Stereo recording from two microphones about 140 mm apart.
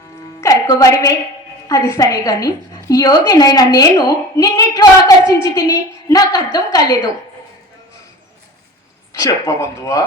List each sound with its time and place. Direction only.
0.4 s a woman's voice: 25° left (ahead or behind)
9.1 s a woman's voice: 20° left (ahead or behind)